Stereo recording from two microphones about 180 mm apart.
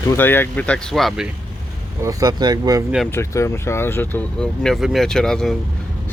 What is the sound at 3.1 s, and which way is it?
Speech, 15° left (ahead or behind).